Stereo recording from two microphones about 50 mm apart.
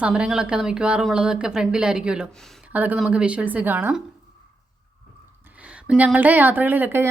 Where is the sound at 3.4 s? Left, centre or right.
Right.